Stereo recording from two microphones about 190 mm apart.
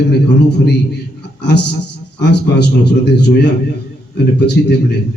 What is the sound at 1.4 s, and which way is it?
A man's voice, 60° left (ahead or behind).